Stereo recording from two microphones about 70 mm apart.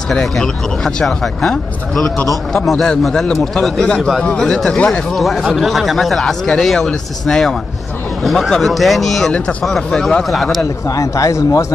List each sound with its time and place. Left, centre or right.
0.1 s a man's voice: centre
5.1 s a man's voice: centre
9.3 s a man's voice: centre
10.6 s a man's voice: left